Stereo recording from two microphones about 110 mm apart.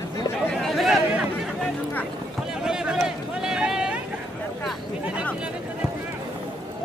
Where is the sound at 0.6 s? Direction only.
Centre (ahead or behind).